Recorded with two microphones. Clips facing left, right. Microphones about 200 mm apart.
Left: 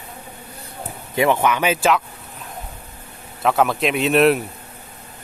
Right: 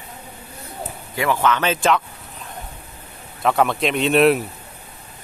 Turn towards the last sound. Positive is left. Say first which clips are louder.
# even
turn(degrees=0)  # may be behind; listen again after turning